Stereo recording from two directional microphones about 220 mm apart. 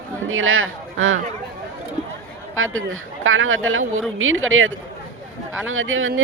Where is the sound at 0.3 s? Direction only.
65° right (ahead or behind).